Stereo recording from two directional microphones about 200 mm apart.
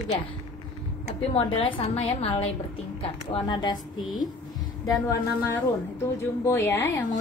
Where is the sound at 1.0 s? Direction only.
25° left (ahead or behind).